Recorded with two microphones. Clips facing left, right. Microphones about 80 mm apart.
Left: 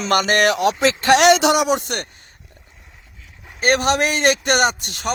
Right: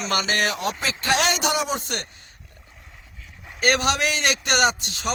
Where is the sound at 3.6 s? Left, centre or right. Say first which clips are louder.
Left 4 dB; left.